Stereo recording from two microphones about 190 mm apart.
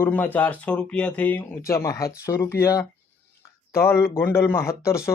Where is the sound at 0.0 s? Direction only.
10° left (ahead or behind).